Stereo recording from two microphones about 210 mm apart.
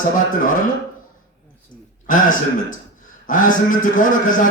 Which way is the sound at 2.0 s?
40° left (ahead or behind).